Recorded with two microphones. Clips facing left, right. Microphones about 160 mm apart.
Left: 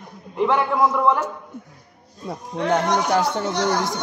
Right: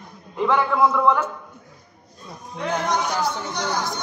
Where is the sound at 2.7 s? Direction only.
65° left (ahead or behind).